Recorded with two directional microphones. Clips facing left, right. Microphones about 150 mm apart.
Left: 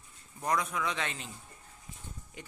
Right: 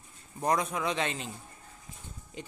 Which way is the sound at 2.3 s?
25° right (ahead or behind).